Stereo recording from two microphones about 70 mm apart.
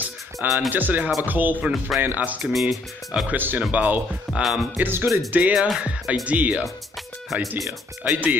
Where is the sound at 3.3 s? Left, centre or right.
Right.